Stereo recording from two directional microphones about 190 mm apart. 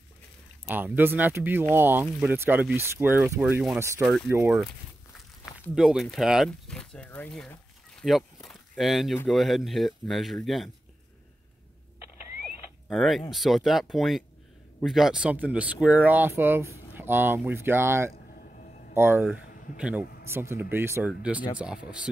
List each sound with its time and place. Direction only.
0.7 s speech: 10° right (ahead or behind)
5.8 s speech: centre (ahead or behind)
8.0 s a sound: centre (ahead or behind)
9.3 s speech: centre (ahead or behind)
12.8 s speech: centre (ahead or behind)
18.6 s a sound: 40° left (ahead or behind)
18.9 s speech: 10° right (ahead or behind)